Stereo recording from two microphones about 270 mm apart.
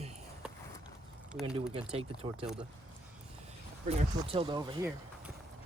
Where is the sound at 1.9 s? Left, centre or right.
Right.